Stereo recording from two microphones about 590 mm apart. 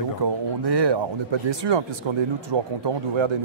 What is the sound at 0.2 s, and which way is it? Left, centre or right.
Speech, right.